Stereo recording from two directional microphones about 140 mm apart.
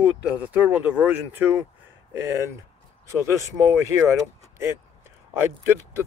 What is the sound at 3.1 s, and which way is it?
Speech, 20° right (ahead or behind).